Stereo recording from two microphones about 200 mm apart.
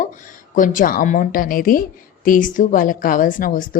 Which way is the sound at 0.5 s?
40° left (ahead or behind).